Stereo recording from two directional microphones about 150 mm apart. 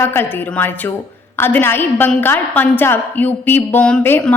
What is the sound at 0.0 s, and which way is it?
A woman's voice, 15° left (ahead or behind).